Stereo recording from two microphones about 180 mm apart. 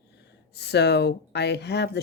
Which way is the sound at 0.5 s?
70° left (ahead or behind).